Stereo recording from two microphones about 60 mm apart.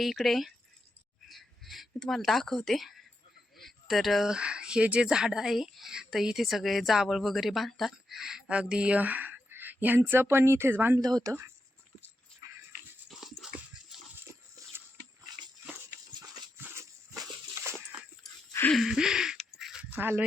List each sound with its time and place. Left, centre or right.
0.0 s a woman's voice: centre
1.3 s a sound: centre
2.0 s a woman's voice: centre
4.3 s a woman's voice: centre
8.4 s speech: centre; by 10.8 s right
11.0 s speech: right
11.3 s speech: right
13.1 s dog: centre
17.6 s a sound: right
18.7 s a sound: centre
19.5 s dog: centre
20.0 s speech: right